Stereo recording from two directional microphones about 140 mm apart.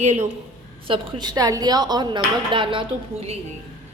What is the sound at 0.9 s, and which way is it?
Speech, 35° right (ahead or behind).